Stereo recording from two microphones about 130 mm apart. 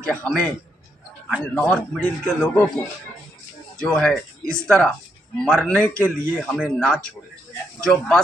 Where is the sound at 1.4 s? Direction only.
10° left (ahead or behind).